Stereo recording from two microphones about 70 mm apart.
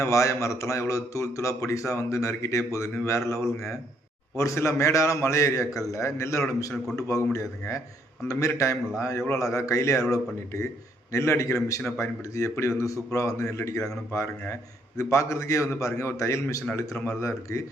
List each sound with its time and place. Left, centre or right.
0.0 s a man's voice: left
8.3 s a man's voice: left